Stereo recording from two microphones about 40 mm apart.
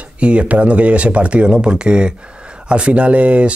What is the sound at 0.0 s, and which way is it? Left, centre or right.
Speech, right.